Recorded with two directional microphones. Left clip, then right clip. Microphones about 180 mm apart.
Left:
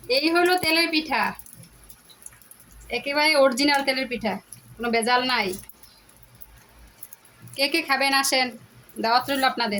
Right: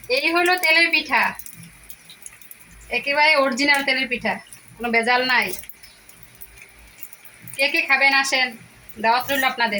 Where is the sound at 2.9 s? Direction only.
85° left.